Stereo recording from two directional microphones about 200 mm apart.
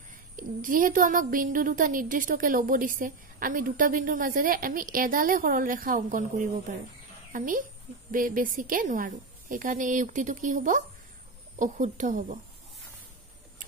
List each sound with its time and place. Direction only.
0.4 s a woman's voice: 40° right (ahead or behind)